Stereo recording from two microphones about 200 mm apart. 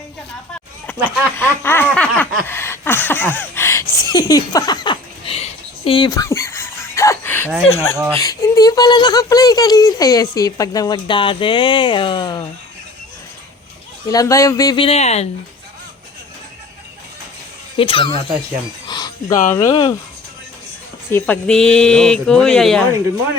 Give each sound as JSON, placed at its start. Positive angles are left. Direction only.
{"t": 0.9, "sound": "speech", "side_deg": -10}
{"t": 1.4, "sound": "a sound", "side_deg": 10}
{"t": 7.7, "sound": "speech", "side_deg": 10}
{"t": 14.1, "sound": "speech", "side_deg": 15}
{"t": 14.8, "sound": "speech", "side_deg": 35}
{"t": 17.7, "sound": "speech", "side_deg": 25}
{"t": 21.1, "sound": "speech", "side_deg": 5}